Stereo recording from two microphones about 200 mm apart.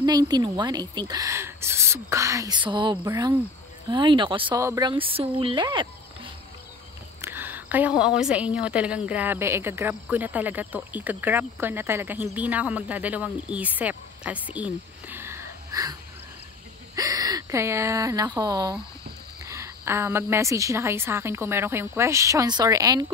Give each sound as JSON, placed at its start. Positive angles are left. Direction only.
{"t": 0.0, "sound": "a woman's voice", "side_deg": -20}
{"t": 7.2, "sound": "a sound", "side_deg": -10}
{"t": 8.5, "sound": "speech", "side_deg": -5}